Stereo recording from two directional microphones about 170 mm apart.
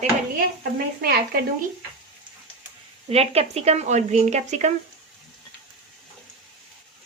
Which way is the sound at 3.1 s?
35° right (ahead or behind).